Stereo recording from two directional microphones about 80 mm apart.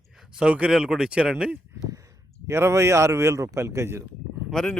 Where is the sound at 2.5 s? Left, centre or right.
Right.